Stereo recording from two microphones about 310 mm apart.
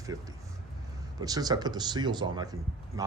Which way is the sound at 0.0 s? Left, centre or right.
Centre.